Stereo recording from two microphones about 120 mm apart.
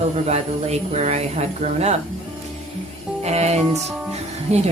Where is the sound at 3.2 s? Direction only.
65° right (ahead or behind).